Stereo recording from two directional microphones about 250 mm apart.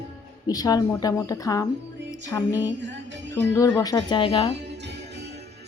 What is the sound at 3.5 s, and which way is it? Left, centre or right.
A woman's voice, centre.